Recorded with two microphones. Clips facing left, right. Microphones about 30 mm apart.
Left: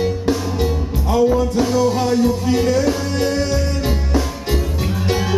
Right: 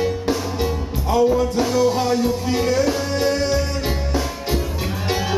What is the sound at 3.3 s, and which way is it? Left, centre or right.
Music, right.